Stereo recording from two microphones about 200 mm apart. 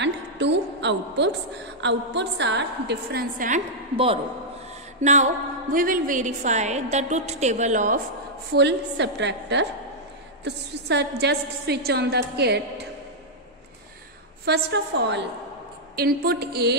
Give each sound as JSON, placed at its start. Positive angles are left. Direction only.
{"t": 0.0, "sound": "a sound", "side_deg": -60}
{"t": 1.8, "sound": "a woman's voice", "side_deg": -60}
{"t": 3.9, "sound": "a man's voice", "side_deg": -25}
{"t": 8.5, "sound": "a woman's voice", "side_deg": -60}
{"t": 14.4, "sound": "a woman's voice", "side_deg": -55}